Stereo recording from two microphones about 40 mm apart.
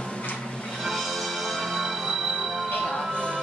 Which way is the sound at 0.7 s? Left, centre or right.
Centre.